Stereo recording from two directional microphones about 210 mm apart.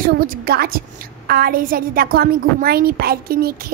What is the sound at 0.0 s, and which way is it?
A woman's voice, 45° right (ahead or behind).